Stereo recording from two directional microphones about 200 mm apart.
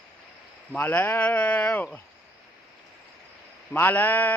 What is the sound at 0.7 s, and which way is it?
Speech, 10° left (ahead or behind).